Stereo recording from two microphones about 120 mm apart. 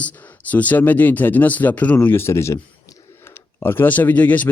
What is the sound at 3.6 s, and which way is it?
Speech, 20° left (ahead or behind).